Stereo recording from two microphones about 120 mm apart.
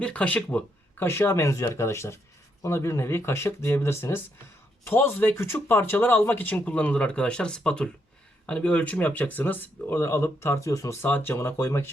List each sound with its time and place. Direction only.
0.0 s speech: 10° left (ahead or behind)